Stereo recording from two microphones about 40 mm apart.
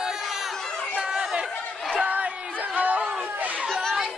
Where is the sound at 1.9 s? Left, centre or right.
Right.